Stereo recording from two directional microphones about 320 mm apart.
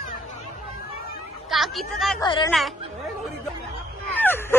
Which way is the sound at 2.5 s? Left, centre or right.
Centre.